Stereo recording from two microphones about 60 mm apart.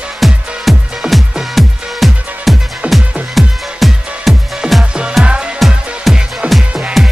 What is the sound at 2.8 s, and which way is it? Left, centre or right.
Music, right.